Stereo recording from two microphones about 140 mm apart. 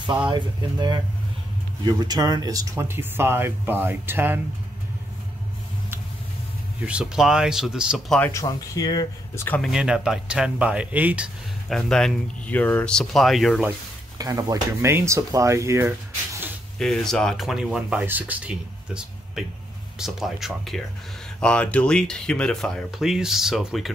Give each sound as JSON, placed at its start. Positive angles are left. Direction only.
{"t": 0.3, "sound": "speech", "side_deg": -30}
{"t": 6.9, "sound": "speech", "side_deg": -5}
{"t": 8.2, "sound": "speech", "side_deg": 20}
{"t": 9.6, "sound": "speech", "side_deg": -5}
{"t": 11.7, "sound": "speech", "side_deg": 5}
{"t": 14.1, "sound": "speech", "side_deg": -25}
{"t": 16.7, "sound": "speech", "side_deg": 5}